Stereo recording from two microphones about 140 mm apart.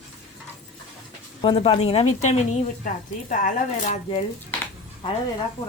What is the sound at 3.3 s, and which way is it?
Speech, 65° left (ahead or behind).